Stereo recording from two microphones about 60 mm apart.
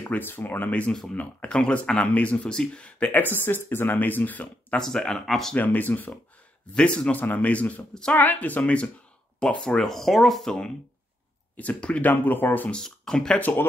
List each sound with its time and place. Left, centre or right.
0.1 s speech: left; by 3.1 s centre
3.1 s speech: left
4.7 s speech: centre
5.5 s speech: left
6.7 s speech: centre
9.8 s speech: centre
11.5 s speech: left
12.7 s speech: centre